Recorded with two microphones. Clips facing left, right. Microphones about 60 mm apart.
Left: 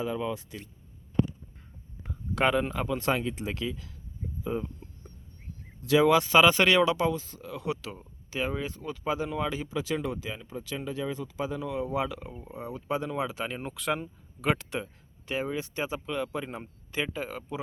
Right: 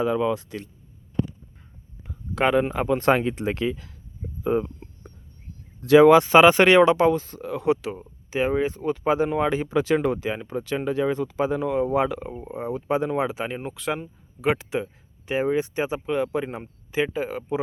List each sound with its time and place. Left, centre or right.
0.0 s speech: right
2.3 s speech: centre
2.7 s speech: right
6.1 s speech: right
7.8 s speech: right
15.3 s speech: right